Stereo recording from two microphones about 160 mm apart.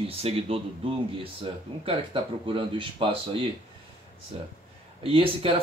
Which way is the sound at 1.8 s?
35° right (ahead or behind).